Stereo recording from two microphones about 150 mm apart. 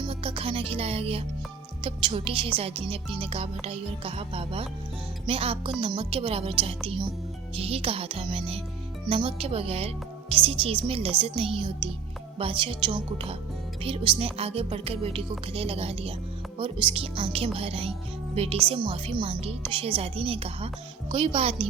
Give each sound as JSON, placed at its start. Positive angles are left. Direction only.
{"t": 0.0, "sound": "a woman's voice", "side_deg": -40}